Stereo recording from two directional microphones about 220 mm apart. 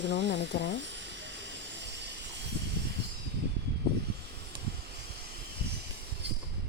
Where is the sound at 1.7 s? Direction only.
50° right (ahead or behind).